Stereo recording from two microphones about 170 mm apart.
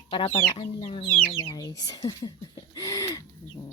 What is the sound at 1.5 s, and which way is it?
Speech, 20° left (ahead or behind).